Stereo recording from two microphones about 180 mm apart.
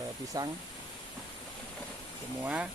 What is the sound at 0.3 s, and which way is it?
Speech, 20° right (ahead or behind).